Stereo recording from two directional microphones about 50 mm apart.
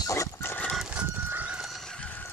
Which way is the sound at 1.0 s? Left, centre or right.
Right.